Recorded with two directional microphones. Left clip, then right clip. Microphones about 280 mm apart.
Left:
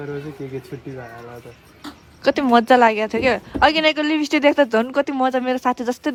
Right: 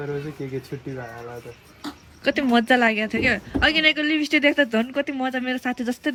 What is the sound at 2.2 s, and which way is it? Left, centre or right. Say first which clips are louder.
Speech: left 5 dB; left.